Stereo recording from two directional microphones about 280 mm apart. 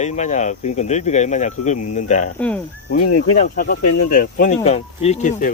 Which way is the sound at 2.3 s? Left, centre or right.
Centre.